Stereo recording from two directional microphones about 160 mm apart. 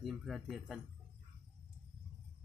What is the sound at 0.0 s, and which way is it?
Speech, centre (ahead or behind).